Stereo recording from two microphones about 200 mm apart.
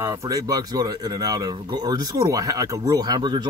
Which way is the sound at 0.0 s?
15° right (ahead or behind).